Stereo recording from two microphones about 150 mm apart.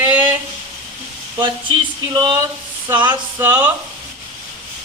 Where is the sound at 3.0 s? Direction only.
15° right (ahead or behind).